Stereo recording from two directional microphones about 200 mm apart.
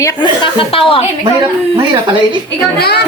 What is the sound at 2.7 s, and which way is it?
Speech, 55° left (ahead or behind).